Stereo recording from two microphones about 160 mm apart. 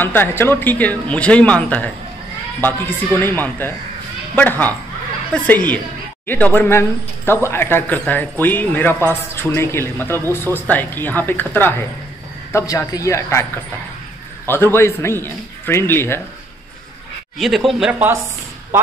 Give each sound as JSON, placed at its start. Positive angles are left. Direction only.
{"t": 0.0, "sound": "speech", "side_deg": 10}
{"t": 6.2, "sound": "speech", "side_deg": 10}
{"t": 14.5, "sound": "speech", "side_deg": 15}
{"t": 17.4, "sound": "speech", "side_deg": 0}